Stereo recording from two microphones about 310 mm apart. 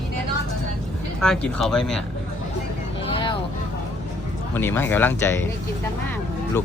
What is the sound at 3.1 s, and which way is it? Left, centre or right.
Vehicle, centre.